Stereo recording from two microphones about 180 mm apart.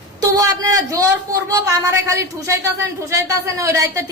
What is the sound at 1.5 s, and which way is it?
A woman's voice, 15° right (ahead or behind).